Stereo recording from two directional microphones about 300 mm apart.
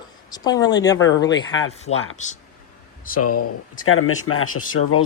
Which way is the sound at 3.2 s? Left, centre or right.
Left.